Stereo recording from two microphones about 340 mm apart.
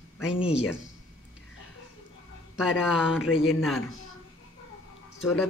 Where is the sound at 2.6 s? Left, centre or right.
Centre.